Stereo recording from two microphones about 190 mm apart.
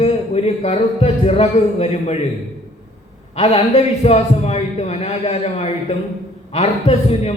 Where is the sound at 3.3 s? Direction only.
35° left (ahead or behind).